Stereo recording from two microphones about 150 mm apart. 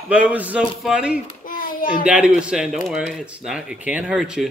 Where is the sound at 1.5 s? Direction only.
70° left (ahead or behind).